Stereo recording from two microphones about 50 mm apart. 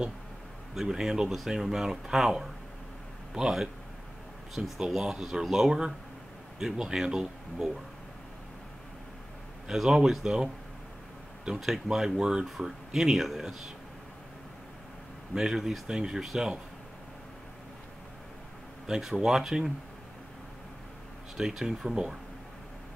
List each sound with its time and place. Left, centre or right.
0.7 s speech: centre
9.8 s speech: centre
11.6 s speech: centre
15.3 s speech: centre
18.9 s speech: centre
21.4 s speech: centre